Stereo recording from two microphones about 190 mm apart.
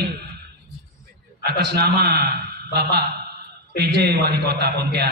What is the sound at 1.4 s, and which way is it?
A man's voice, 60° right (ahead or behind).